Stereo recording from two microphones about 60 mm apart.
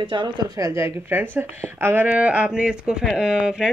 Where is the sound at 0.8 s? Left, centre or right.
Right.